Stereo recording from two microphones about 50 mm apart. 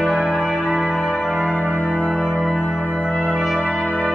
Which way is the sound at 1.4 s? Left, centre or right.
Left.